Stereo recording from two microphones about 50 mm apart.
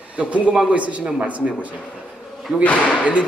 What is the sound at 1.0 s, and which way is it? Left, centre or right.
Speech, centre.